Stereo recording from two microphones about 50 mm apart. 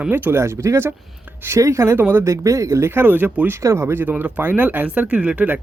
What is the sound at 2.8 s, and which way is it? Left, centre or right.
Speech, right.